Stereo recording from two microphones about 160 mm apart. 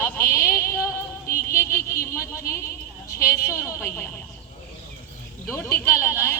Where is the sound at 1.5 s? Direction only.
15° left (ahead or behind).